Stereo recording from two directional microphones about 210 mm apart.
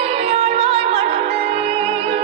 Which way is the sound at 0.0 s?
30° right (ahead or behind).